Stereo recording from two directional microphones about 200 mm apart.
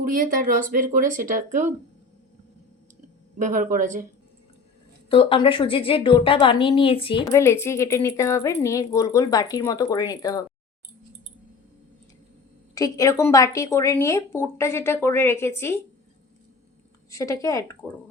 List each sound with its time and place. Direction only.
0.0 s speech: 45° right (ahead or behind)
3.3 s speech: 40° right (ahead or behind)
5.0 s a woman's voice: 25° left (ahead or behind)
7.3 s speech: 15° left (ahead or behind)
12.7 s speech: 15° left (ahead or behind)
17.1 s speech: 15° left (ahead or behind)